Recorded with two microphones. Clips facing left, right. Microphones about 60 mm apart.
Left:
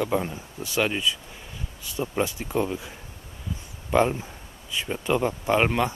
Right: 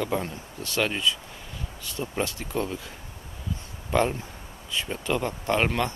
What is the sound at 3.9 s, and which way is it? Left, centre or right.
Speech, centre.